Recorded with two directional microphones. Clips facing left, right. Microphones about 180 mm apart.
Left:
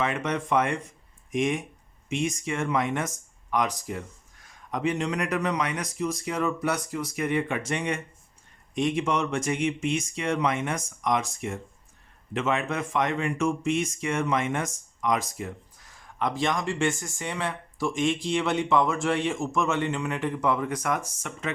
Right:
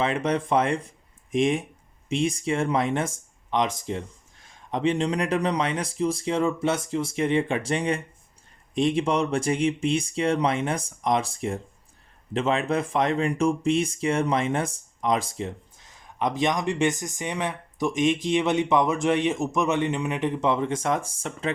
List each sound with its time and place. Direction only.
0.0 s speech: 30° right (ahead or behind)